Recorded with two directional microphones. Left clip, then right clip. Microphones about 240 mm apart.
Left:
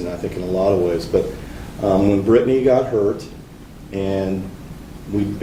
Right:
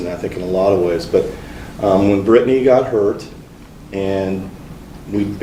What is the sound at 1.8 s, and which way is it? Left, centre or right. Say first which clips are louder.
Speech: right 3 dB; right.